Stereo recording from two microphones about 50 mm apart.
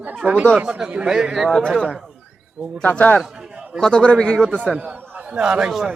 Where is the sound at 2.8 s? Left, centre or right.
Left.